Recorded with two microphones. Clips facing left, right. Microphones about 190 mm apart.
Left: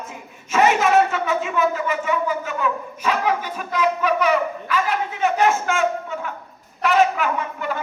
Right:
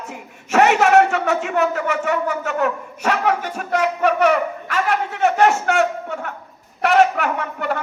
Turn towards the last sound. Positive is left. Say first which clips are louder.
# right 2 dB
turn(degrees=-70)  # may be behind; listen again after turning